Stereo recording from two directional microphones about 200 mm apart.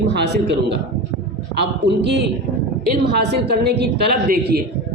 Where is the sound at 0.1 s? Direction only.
60° right (ahead or behind).